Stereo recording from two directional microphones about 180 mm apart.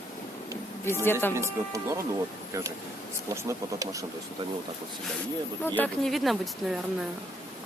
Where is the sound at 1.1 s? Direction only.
10° left (ahead or behind).